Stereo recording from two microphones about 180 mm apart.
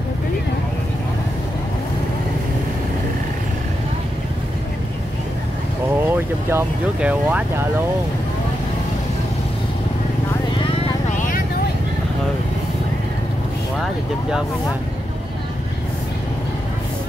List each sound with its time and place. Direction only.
6.0 s speech: 10° right (ahead or behind)
11.1 s vehicle: 50° left (ahead or behind)